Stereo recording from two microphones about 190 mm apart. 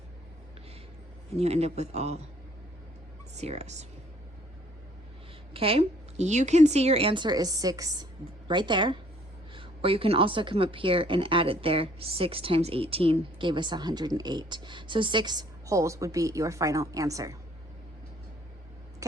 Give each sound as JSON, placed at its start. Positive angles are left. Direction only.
{"t": 1.4, "sound": "a woman's voice", "side_deg": -35}
{"t": 3.3, "sound": "a woman's voice", "side_deg": -35}
{"t": 5.5, "sound": "a woman's voice", "side_deg": -30}